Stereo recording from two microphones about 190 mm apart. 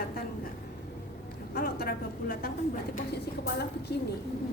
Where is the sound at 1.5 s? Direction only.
50° left (ahead or behind).